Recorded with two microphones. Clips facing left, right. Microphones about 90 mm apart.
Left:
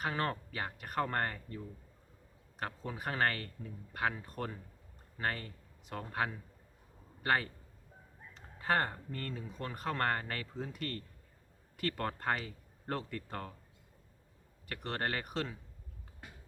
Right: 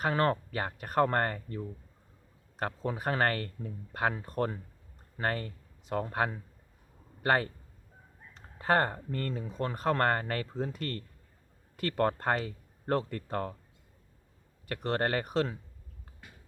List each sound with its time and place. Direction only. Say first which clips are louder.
0.0 s speech: right 7 dB; 55° right (ahead or behind)
14.8 s speech: right 7 dB; 40° right (ahead or behind)